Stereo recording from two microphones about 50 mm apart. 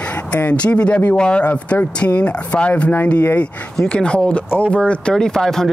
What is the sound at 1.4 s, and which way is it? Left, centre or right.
Speech, left.